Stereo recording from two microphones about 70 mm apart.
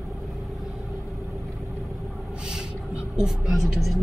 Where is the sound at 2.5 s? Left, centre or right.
Centre.